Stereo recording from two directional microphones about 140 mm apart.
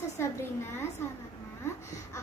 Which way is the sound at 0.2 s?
15° left (ahead or behind).